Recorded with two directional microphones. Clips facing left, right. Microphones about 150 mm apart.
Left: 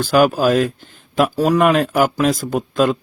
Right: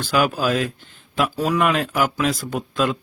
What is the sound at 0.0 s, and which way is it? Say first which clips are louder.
Speech: left 6 dB; 45° left (ahead or behind).